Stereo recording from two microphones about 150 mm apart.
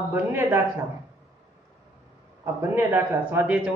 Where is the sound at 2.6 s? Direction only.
15° right (ahead or behind).